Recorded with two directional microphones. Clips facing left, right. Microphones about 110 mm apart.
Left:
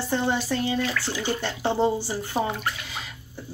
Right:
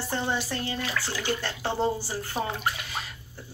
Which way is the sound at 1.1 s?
20° left (ahead or behind).